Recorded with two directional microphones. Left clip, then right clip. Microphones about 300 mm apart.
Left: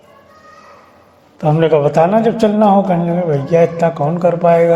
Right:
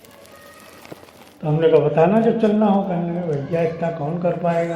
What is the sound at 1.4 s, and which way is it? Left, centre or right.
Speech, left.